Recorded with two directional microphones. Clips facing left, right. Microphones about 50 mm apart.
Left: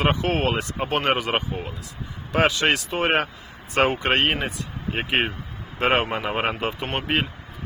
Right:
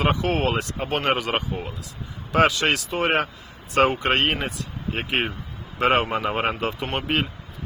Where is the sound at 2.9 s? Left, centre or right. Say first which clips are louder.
Even; left.